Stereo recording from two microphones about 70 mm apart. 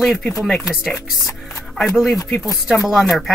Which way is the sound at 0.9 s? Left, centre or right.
Left.